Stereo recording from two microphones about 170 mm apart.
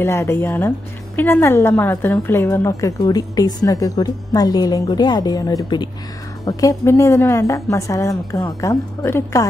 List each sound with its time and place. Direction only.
0.0 s a woman's voice: 15° left (ahead or behind)